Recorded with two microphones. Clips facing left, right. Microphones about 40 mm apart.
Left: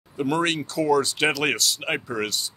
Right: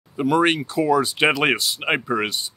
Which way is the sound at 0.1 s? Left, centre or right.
Centre.